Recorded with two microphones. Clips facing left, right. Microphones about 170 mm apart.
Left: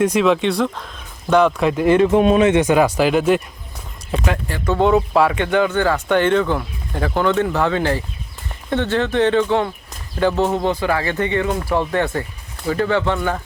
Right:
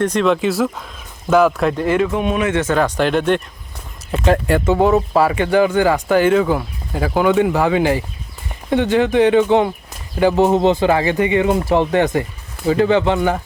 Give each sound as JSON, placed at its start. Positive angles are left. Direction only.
{"t": 0.0, "sound": "speech", "side_deg": 5}
{"t": 1.8, "sound": "speech", "side_deg": 20}
{"t": 2.1, "sound": "speech", "side_deg": 30}